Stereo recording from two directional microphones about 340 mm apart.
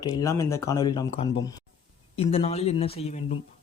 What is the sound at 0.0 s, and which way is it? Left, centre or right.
A man's voice, centre.